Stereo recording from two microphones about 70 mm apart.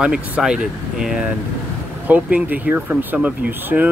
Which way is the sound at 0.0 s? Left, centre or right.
Centre.